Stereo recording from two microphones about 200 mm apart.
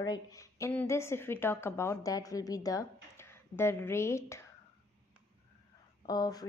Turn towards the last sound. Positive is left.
turn(degrees=20)  # may be behind; listen again after turning